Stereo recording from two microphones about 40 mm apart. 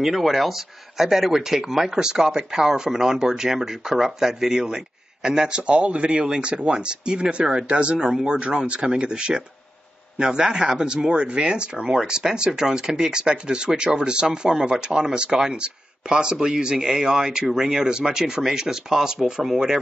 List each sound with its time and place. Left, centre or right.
0.0 s speech: centre
5.6 s speech: right
8.0 s speech: centre
8.4 s speech: right
11.9 s speech: centre
19.4 s speech: centre